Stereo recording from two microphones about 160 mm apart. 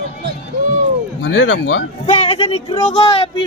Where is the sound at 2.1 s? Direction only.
35° left (ahead or behind).